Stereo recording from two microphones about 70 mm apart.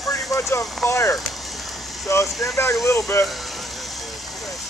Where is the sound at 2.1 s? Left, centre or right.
Left.